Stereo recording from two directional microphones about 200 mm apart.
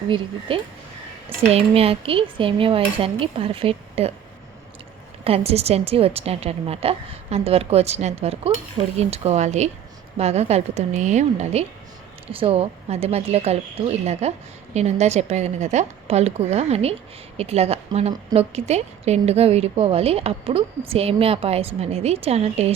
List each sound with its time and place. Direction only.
0.1 s cutlery: 25° right (ahead or behind)
5.2 s a woman's voice: 30° right (ahead or behind)